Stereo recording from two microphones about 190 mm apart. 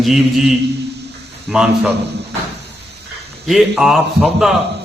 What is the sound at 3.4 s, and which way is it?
A man's voice, centre (ahead or behind).